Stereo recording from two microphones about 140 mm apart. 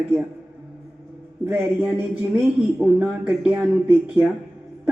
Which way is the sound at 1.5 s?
15° right (ahead or behind).